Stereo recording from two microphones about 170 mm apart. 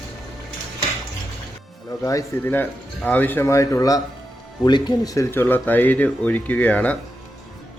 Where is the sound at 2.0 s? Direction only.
15° left (ahead or behind).